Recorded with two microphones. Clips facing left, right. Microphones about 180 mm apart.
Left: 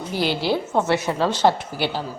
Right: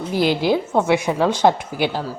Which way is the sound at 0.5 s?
10° right (ahead or behind).